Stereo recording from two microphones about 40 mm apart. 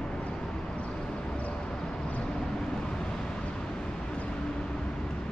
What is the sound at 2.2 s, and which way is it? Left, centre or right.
Vehicle, centre.